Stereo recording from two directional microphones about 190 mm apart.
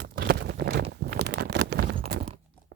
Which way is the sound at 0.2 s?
60° right (ahead or behind).